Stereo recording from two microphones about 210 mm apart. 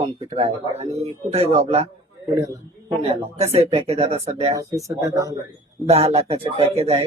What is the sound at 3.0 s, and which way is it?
Speech, 30° right (ahead or behind).